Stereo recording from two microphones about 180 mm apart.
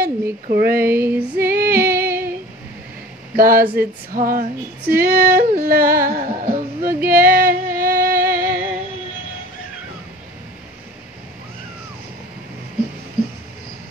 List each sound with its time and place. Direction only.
0.0 s yodeling: 55° right (ahead or behind)
0.8 s female singing: 10° right (ahead or behind)
1.4 s female singing: 55° right (ahead or behind)
3.3 s yodeling: 55° right (ahead or behind)
3.7 s female singing: 50° right (ahead or behind)
4.9 s yodeling: 55° right (ahead or behind)
7.1 s music: 55° right (ahead or behind)